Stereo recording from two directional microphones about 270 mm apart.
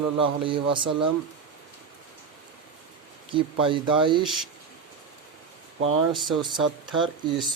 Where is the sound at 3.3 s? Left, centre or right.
Centre.